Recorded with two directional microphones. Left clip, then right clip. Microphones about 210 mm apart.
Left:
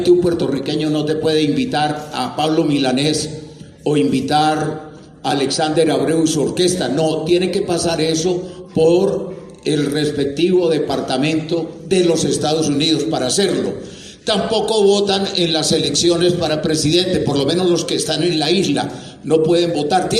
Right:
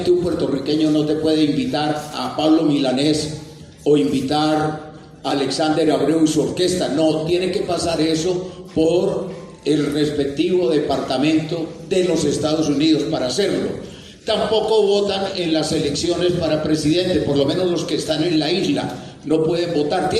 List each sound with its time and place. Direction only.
0.0 s a man's voice: 35° left (ahead or behind)